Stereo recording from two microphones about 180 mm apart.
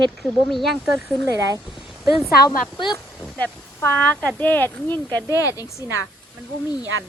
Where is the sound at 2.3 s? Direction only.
55° left (ahead or behind).